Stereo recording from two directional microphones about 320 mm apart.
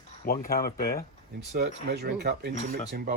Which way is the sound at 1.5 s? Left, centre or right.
Right.